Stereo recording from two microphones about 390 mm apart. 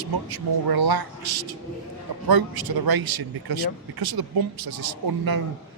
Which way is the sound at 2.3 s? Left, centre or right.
Right.